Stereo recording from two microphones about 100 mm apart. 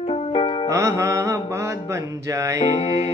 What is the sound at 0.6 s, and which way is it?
Mantra, 35° right (ahead or behind).